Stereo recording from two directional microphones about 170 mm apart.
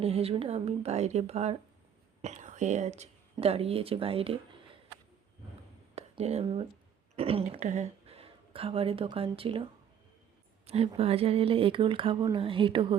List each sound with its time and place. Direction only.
0.0 s speech: 35° right (ahead or behind)
5.9 s a woman's voice: 40° right (ahead or behind)
10.7 s a woman's voice: 35° right (ahead or behind)